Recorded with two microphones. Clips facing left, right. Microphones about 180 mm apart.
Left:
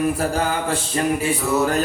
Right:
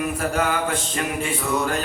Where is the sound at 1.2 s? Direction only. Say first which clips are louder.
Left 3 dB; 5° left (ahead or behind).